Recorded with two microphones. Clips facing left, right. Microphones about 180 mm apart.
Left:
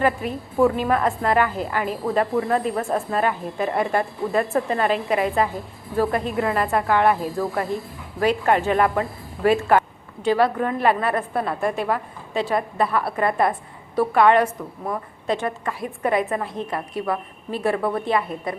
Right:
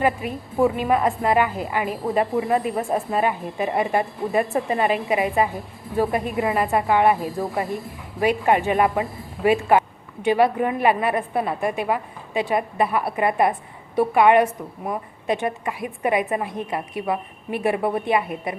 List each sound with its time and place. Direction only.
0.0 s speech: 5° right (ahead or behind)